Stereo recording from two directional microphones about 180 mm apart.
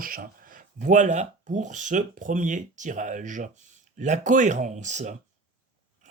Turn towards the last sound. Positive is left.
turn(degrees=-40)  # may be behind; listen again after turning